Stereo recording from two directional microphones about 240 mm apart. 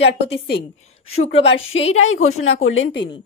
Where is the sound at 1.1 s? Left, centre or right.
Left.